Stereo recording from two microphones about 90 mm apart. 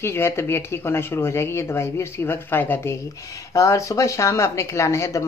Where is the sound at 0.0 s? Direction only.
30° left (ahead or behind).